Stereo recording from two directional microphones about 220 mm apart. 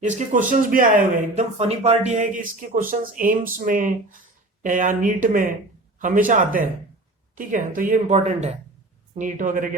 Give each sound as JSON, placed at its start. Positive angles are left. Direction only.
{"t": 0.0, "sound": "speech", "side_deg": -35}